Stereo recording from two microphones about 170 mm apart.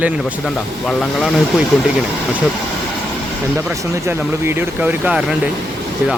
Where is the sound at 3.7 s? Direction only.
15° right (ahead or behind).